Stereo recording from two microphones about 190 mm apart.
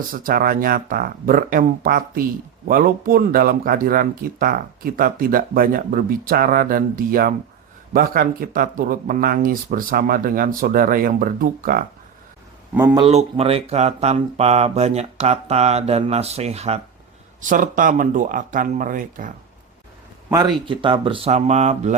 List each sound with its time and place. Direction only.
0.1 s speech: 50° right (ahead or behind)
12.7 s speech: 15° right (ahead or behind)
13.0 s speech: 30° right (ahead or behind)
20.3 s speech: 20° right (ahead or behind); by 21.9 s 35° right (ahead or behind)